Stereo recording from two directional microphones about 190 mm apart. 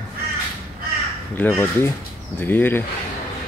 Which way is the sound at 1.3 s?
10° left (ahead or behind).